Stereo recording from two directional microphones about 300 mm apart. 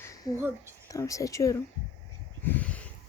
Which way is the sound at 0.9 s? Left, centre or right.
Centre.